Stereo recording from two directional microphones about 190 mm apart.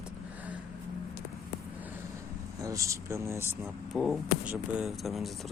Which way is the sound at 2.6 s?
15° right (ahead or behind).